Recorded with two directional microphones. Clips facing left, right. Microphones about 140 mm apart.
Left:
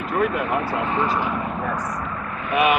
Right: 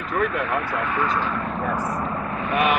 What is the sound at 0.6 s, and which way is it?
Speech, 30° left (ahead or behind).